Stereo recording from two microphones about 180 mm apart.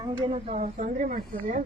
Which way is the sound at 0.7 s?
45° right (ahead or behind).